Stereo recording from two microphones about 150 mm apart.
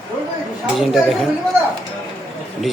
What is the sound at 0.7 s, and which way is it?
Speech, centre (ahead or behind).